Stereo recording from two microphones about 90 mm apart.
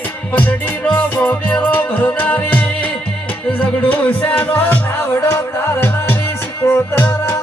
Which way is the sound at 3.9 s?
20° left (ahead or behind).